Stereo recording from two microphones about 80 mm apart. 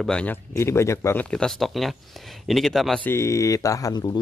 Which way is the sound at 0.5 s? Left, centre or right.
Left.